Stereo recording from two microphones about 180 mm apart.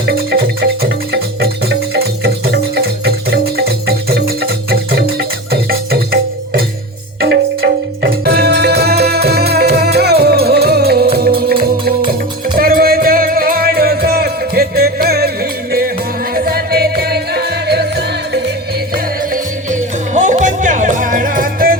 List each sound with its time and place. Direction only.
0.0 s music: 60° right (ahead or behind)
16.3 s music: 55° right (ahead or behind)
19.3 s music: 45° right (ahead or behind)